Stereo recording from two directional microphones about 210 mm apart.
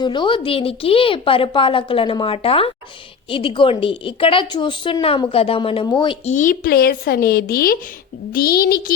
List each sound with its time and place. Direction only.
0.0 s a woman's voice: 20° left (ahead or behind)
6.3 s speech: 40° left (ahead or behind)